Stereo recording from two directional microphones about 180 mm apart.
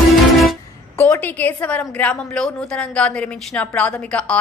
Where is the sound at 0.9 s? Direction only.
10° left (ahead or behind).